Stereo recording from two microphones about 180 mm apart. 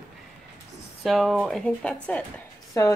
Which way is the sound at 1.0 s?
Centre (ahead or behind).